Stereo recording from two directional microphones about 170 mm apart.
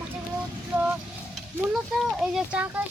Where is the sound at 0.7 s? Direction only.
10° right (ahead or behind).